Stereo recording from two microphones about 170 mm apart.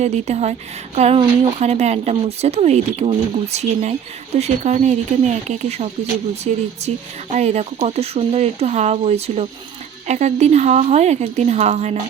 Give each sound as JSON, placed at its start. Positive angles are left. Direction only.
{"t": 0.0, "sound": "speech", "side_deg": -40}